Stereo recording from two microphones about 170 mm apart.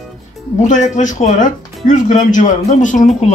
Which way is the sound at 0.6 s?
45° left (ahead or behind).